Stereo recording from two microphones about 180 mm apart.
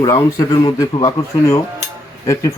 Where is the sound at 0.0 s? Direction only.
20° left (ahead or behind).